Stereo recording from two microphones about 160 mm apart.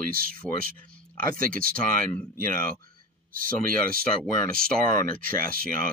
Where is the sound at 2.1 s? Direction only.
10° left (ahead or behind).